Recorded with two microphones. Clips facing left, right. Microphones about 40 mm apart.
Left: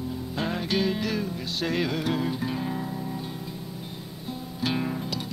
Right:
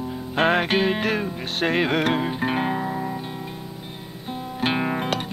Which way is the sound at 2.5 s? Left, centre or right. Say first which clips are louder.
Right 7 dB; right.